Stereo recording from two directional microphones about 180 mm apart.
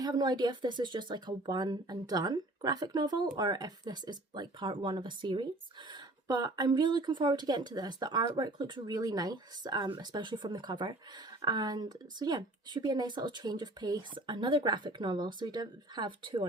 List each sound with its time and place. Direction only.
0.0 s speech: 20° right (ahead or behind)